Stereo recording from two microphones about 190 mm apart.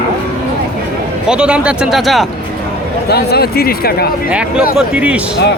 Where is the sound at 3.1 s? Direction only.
60° left (ahead or behind).